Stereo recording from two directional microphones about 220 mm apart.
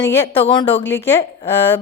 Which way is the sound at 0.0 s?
10° left (ahead or behind).